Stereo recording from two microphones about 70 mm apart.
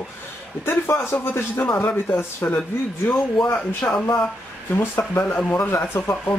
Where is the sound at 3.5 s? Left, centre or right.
Left.